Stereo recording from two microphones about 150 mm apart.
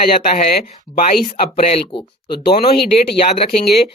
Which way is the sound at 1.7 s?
35° left (ahead or behind).